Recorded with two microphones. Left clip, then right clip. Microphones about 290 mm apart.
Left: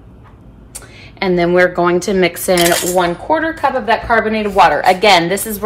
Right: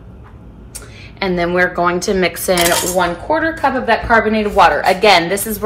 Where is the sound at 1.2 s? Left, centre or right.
Left.